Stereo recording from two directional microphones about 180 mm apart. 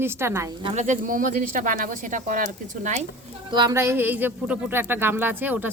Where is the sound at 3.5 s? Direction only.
20° right (ahead or behind).